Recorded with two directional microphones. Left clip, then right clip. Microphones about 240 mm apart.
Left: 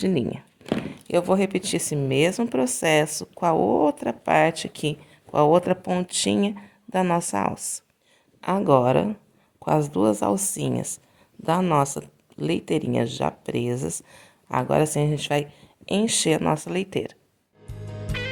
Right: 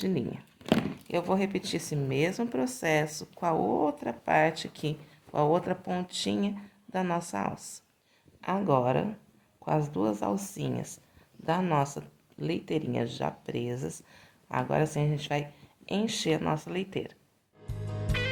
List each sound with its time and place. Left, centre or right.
0.0 s speech: left
17.7 s music: centre